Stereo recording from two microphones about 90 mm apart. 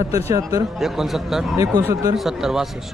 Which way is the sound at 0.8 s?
5° right (ahead or behind).